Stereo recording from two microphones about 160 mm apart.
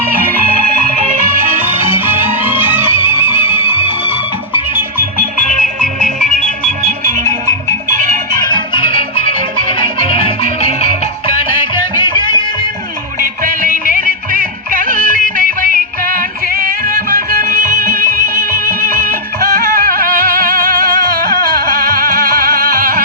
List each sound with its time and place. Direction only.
2.1 s music: 15° right (ahead or behind)
3.6 s music: 35° left (ahead or behind)
5.8 s music: 5° left (ahead or behind)
8.4 s music: 30° left (ahead or behind)
11.6 s music: 30° left (ahead or behind)
13.4 s music: 55° right (ahead or behind)
21.9 s music: 65° right (ahead or behind)